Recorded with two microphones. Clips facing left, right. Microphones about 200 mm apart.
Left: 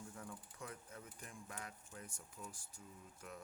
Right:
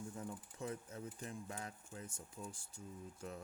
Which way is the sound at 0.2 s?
25° right (ahead or behind).